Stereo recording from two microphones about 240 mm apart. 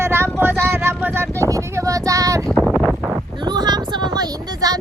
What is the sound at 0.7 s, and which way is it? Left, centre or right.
Vehicle, centre.